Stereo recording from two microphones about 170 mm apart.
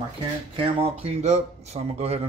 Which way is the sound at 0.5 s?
35° right (ahead or behind).